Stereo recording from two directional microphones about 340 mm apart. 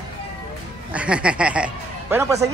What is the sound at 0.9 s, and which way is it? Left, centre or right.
Speech, centre.